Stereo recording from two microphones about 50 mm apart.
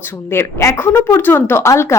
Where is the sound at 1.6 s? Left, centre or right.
Left.